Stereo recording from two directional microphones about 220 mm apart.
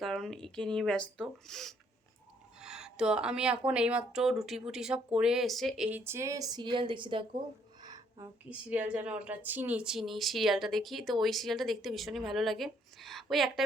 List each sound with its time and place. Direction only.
0.0 s a woman's voice: centre (ahead or behind); by 7.3 s 20° right (ahead or behind)
7.8 s a sound: 15° right (ahead or behind)
8.4 s a woman's voice: 5° right (ahead or behind)